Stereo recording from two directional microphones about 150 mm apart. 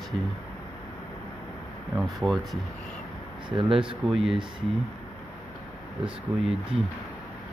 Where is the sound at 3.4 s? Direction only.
35° right (ahead or behind).